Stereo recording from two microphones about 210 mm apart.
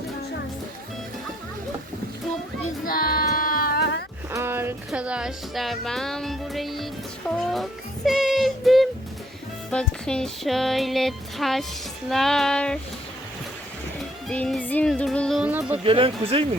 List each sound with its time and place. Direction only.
2.8 s music: 45° left (ahead or behind)
4.3 s a sound: 10° right (ahead or behind)
4.9 s speech: 5° right (ahead or behind)
7.3 s music: centre (ahead or behind)
9.6 s speech: 5° left (ahead or behind)
14.0 s music: 5° left (ahead or behind)
15.7 s speech: 25° right (ahead or behind)